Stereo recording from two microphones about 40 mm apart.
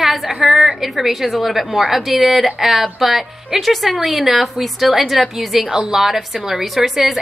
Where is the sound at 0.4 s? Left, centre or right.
Centre.